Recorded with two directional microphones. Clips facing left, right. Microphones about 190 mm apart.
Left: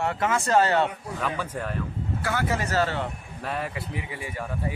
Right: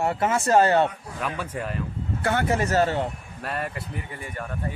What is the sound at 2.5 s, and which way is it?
Speech, 45° right (ahead or behind).